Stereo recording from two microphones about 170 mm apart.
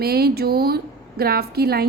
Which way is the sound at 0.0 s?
65° right (ahead or behind).